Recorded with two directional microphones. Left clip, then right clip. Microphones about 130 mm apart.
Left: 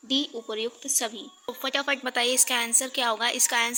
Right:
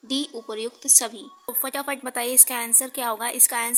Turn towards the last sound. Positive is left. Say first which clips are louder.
# left 2 dB
turn(degrees=-20)  # may be behind; listen again after turning